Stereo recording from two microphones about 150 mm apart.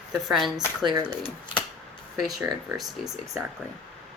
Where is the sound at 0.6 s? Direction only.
30° right (ahead or behind).